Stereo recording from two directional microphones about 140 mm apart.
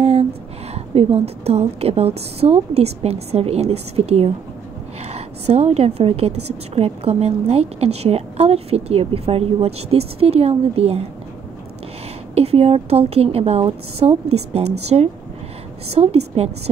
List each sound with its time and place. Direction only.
0.0 s a sound: 50° right (ahead or behind)
0.7 s a woman's voice: 45° right (ahead or behind)
12.4 s a woman's voice: 45° right (ahead or behind)